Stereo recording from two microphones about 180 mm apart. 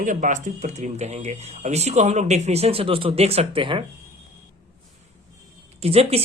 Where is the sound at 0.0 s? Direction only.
45° right (ahead or behind); by 3.8 s 30° right (ahead or behind).